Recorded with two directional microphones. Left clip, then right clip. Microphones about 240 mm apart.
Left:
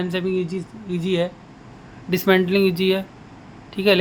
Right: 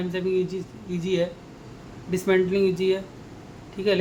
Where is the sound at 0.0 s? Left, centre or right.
Left.